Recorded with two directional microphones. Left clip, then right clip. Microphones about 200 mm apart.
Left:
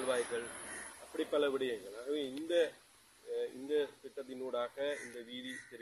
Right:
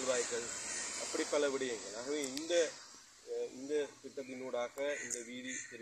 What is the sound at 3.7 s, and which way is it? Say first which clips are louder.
Speech: left 2 dB; 5° left (ahead or behind).